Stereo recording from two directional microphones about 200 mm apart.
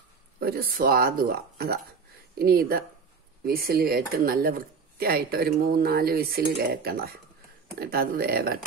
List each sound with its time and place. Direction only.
0.4 s speech: 50° right (ahead or behind)